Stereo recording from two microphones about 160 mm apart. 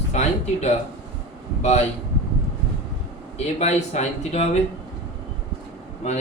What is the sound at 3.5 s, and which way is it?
Speech, 45° left (ahead or behind).